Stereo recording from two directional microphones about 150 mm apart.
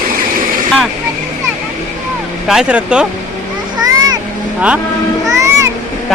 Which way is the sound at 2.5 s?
5° right (ahead or behind).